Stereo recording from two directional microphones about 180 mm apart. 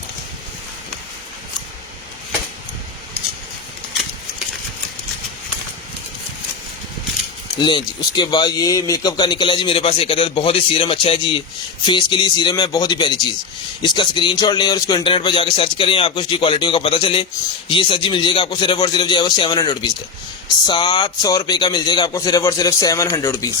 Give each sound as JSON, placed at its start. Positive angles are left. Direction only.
{"t": 7.6, "sound": "speech", "side_deg": 25}